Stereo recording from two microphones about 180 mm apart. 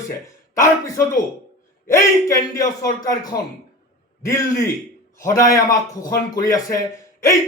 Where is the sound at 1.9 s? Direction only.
15° left (ahead or behind).